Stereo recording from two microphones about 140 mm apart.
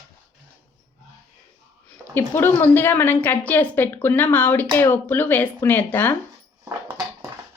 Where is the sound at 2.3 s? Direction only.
15° left (ahead or behind).